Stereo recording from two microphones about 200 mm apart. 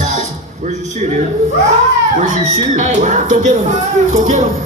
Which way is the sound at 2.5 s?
35° right (ahead or behind).